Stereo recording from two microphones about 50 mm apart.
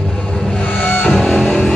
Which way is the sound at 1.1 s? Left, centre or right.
Centre.